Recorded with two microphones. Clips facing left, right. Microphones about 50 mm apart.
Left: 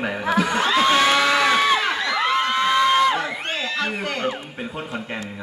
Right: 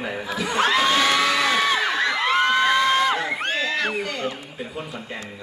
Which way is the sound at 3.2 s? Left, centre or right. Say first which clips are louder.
Right 2 dB; right.